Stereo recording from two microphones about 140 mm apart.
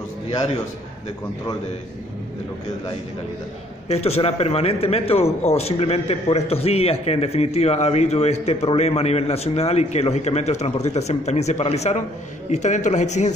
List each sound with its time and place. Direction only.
3.9 s a man's voice: 45° left (ahead or behind)